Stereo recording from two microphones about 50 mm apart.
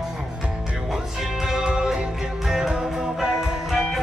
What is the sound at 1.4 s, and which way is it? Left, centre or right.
Music, centre.